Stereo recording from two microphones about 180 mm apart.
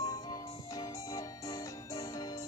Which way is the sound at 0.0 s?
20° left (ahead or behind).